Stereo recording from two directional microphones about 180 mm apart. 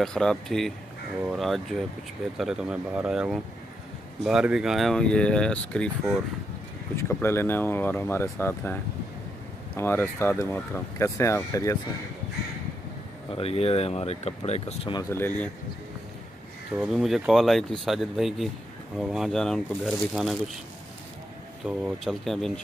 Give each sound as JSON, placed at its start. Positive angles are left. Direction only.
{"t": 0.0, "sound": "speech", "side_deg": 5}
{"t": 7.0, "sound": "speech", "side_deg": 15}
{"t": 9.8, "sound": "speech", "side_deg": 15}
{"t": 13.3, "sound": "speech", "side_deg": 35}
{"t": 15.0, "sound": "speech", "side_deg": 10}
{"t": 16.7, "sound": "speech", "side_deg": 0}
{"t": 21.6, "sound": "speech", "side_deg": 0}